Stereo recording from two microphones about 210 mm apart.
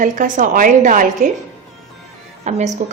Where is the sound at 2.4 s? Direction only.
35° right (ahead or behind).